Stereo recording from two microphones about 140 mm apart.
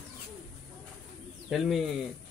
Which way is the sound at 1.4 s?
Centre (ahead or behind).